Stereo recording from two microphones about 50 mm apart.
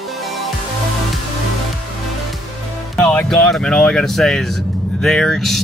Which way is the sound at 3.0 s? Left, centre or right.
Left.